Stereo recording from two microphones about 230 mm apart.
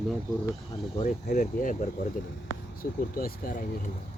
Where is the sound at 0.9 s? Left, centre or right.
Left.